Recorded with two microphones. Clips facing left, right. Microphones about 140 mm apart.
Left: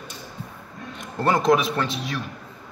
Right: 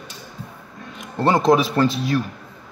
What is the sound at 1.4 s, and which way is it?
Speech, centre (ahead or behind).